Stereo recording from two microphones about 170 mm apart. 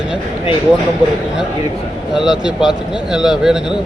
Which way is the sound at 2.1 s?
5° right (ahead or behind).